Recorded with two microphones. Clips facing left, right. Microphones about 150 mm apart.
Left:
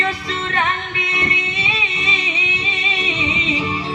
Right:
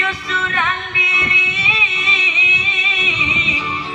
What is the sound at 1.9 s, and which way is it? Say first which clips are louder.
Music: left 1 dB; 30° left (ahead or behind).